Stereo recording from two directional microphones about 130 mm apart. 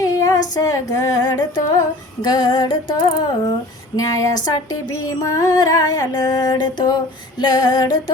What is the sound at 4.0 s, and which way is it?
Music, 25° left (ahead or behind).